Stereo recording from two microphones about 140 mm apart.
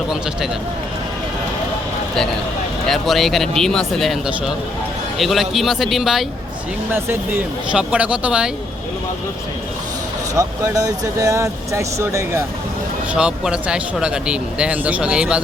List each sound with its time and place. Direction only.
2.8 s speech: centre (ahead or behind)
6.9 s speech: 15° right (ahead or behind)
10.3 s speech: 25° right (ahead or behind)
13.1 s speech: 5° right (ahead or behind)